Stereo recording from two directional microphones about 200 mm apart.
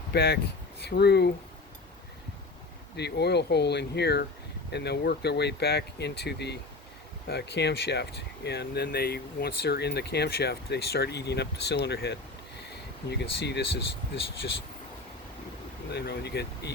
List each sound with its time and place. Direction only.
0.1 s speech: 55° left (ahead or behind)
2.9 s speech: 55° left (ahead or behind)
15.9 s speech: 55° left (ahead or behind)